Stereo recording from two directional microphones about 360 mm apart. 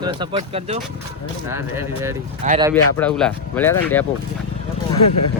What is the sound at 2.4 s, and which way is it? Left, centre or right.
Speech, right.